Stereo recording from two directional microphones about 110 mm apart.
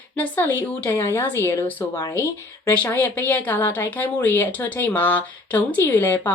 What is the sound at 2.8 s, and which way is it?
A woman's voice, 20° left (ahead or behind).